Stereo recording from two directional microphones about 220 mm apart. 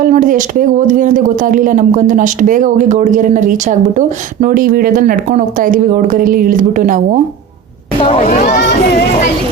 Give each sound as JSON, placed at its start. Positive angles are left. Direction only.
{"t": 0.0, "sound": "speech", "side_deg": -35}
{"t": 8.0, "sound": "speech", "side_deg": 25}
{"t": 8.3, "sound": "speech", "side_deg": 35}